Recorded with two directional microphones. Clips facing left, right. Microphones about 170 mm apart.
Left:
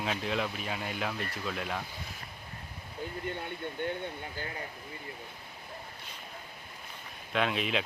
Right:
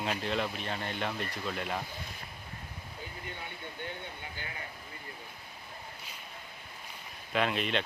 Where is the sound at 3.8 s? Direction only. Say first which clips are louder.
Left 7 dB; 50° left (ahead or behind).